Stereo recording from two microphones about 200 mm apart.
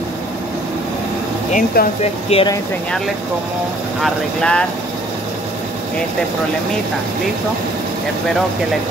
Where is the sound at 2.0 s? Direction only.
30° left (ahead or behind).